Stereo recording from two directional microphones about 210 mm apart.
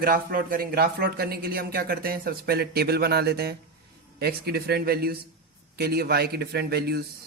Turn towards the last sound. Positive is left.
turn(degrees=-50)  # may be behind; listen again after turning